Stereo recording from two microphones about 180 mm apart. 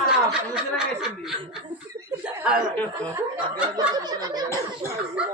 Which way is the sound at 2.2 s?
5° right (ahead or behind).